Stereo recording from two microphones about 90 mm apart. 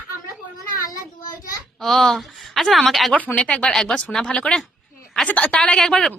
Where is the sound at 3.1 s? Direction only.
15° left (ahead or behind).